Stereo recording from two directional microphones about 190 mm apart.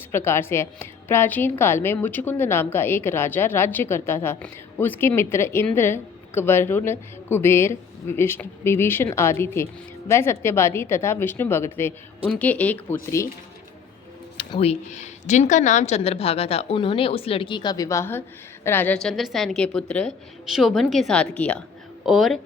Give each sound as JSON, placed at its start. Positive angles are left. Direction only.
{"t": 0.1, "sound": "a woman's voice", "side_deg": 15}
{"t": 14.3, "sound": "a woman's voice", "side_deg": 30}